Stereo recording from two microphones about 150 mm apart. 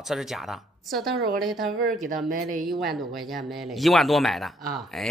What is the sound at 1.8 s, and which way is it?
Speech, 70° right (ahead or behind).